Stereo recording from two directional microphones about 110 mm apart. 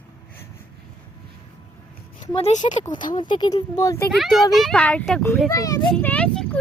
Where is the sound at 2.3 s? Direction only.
65° left (ahead or behind).